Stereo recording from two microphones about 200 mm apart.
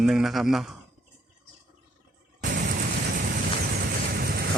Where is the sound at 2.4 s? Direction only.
45° right (ahead or behind).